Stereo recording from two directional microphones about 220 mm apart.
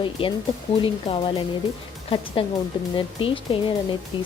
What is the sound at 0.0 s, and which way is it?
Speech, 20° left (ahead or behind).